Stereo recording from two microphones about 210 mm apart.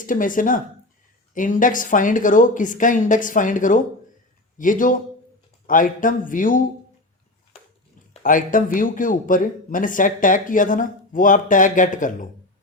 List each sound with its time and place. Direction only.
0.0 s a man's voice: 40° left (ahead or behind)
8.1 s a man's voice: 40° left (ahead or behind)